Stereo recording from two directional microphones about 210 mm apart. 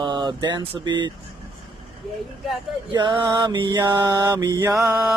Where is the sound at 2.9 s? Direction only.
20° right (ahead or behind).